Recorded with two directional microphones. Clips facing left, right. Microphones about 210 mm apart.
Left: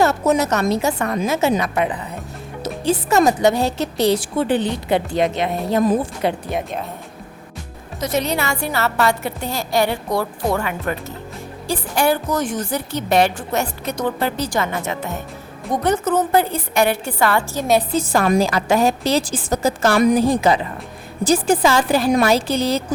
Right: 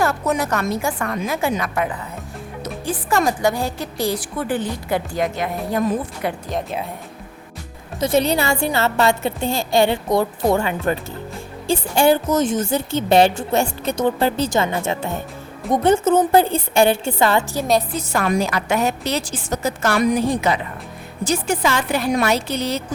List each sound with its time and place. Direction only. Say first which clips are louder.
0.0 s a woman's voice: left 4 dB; 25° left (ahead or behind)
3.2 s a woman's voice: left 3 dB; 25° left (ahead or behind)
3.7 s a woman's voice: left 5 dB; 75° left (ahead or behind)
4.1 s a woman's voice: left 5 dB; 25° left (ahead or behind)
6.5 s speech: left 1 dB; 5° left (ahead or behind)
8.0 s a woman's voice: right 3 dB; 30° right (ahead or behind)
17.9 s a woman's voice: left 4 dB; 30° left (ahead or behind)
20.0 s a woman's voice: left 3 dB; 40° left (ahead or behind)